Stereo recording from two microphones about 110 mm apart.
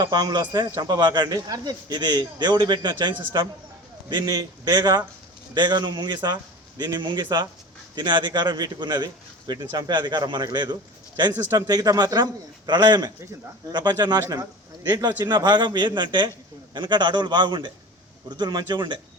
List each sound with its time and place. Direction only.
0.0 s a man's voice: 40° right (ahead or behind)